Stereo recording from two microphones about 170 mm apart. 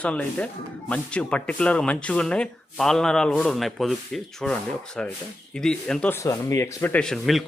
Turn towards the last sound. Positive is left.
turn(degrees=0)  # may be behind; listen again after turning